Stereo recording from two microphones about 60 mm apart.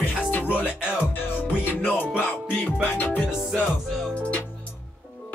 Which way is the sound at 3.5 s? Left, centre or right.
Centre.